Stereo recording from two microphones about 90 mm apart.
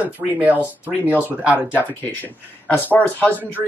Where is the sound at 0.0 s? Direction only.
15° right (ahead or behind).